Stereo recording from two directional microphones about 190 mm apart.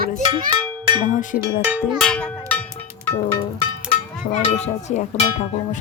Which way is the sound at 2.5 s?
5° left (ahead or behind).